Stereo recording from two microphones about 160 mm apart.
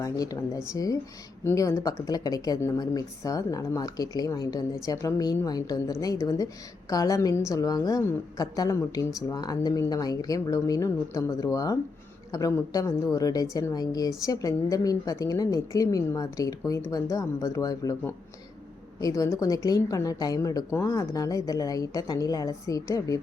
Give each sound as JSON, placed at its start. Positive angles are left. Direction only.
{"t": 0.0, "sound": "speech", "side_deg": 20}
{"t": 18.9, "sound": "speech", "side_deg": 20}